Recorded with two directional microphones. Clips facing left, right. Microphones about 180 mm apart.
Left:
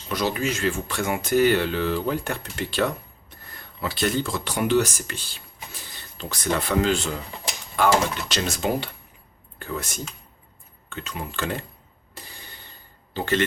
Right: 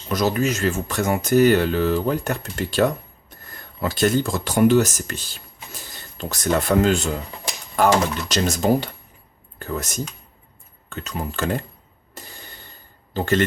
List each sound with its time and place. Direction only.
0.1 s speech: 45° right (ahead or behind)
12.2 s a sound: 45° right (ahead or behind)
13.1 s speech: 45° right (ahead or behind)